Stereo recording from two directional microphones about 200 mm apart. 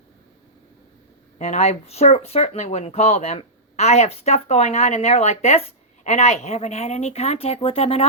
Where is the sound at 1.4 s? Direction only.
35° left (ahead or behind).